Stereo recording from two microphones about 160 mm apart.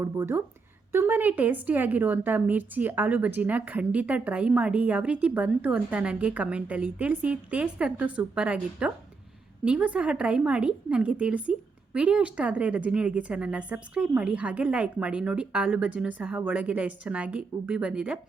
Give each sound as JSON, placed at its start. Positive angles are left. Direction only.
{"t": 0.0, "sound": "a woman's voice", "side_deg": -15}